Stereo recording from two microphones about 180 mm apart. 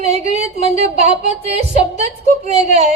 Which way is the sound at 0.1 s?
35° right (ahead or behind).